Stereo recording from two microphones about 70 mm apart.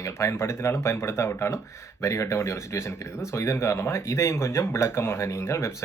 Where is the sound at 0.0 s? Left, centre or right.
Left.